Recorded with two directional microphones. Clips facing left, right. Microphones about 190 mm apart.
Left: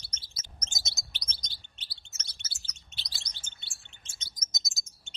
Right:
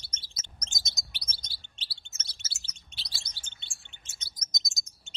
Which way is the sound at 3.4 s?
40° left (ahead or behind).